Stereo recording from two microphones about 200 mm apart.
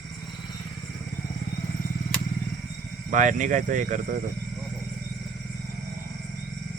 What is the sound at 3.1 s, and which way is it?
Speech, 40° right (ahead or behind).